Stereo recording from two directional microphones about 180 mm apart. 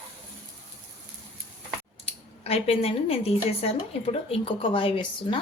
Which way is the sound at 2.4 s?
35° left (ahead or behind).